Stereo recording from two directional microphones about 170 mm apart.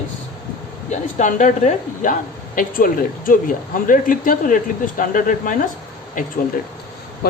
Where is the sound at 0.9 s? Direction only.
45° left (ahead or behind).